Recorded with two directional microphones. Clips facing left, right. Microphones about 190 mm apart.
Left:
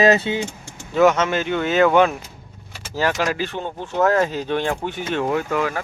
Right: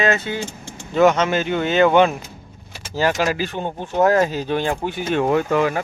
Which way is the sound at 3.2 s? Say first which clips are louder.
Right 2 dB; 5° right (ahead or behind).